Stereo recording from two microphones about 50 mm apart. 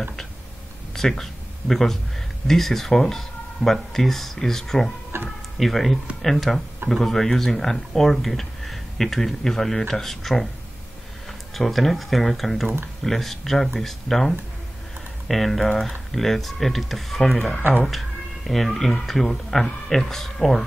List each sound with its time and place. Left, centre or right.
0.9 s speech: centre
5.1 s tick-tock: right
5.6 s speech: centre
11.5 s speech: centre
17.4 s speech: left
18.5 s speech: centre